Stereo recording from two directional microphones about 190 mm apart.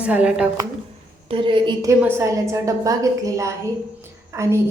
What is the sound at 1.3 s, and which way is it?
A woman's voice, 25° right (ahead or behind).